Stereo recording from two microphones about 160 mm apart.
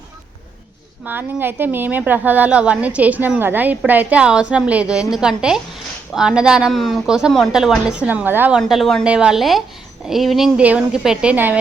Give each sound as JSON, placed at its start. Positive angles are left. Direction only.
{"t": 1.0, "sound": "a woman's voice", "side_deg": -10}
{"t": 8.6, "sound": "speech", "side_deg": 0}